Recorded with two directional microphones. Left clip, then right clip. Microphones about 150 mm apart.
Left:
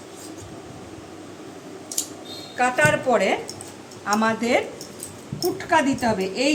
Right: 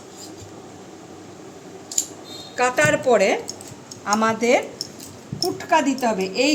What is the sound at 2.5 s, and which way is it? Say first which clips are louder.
Speech: right 1 dB; 90° right.